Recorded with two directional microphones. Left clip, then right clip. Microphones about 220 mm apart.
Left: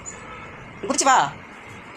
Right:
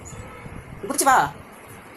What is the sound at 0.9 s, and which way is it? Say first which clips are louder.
Speech: even; 15° left (ahead or behind).